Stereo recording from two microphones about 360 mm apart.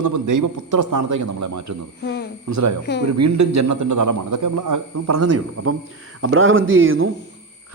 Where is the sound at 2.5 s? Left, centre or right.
Right.